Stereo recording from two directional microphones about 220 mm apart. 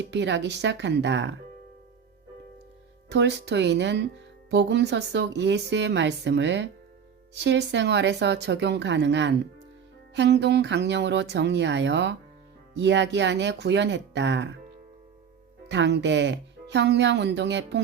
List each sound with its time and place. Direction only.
0.0 s speech: 55° right (ahead or behind)
3.1 s speech: 50° right (ahead or behind)
15.7 s speech: 55° right (ahead or behind)